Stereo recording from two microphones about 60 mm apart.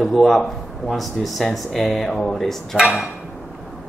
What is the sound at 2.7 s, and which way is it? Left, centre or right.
Speech, centre.